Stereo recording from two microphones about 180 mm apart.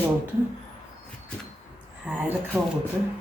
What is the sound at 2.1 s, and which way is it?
Speech, 5° right (ahead or behind).